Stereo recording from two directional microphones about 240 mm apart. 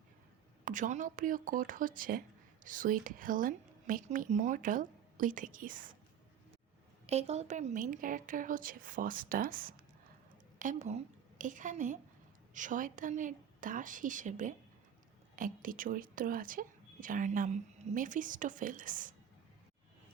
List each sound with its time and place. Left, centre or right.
0.6 s speech: right
7.1 s a woman's voice: right